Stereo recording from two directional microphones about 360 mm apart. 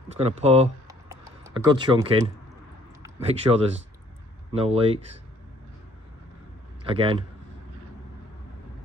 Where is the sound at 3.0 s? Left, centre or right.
Centre.